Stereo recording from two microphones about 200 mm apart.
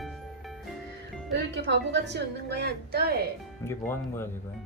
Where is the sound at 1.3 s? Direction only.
60° right (ahead or behind).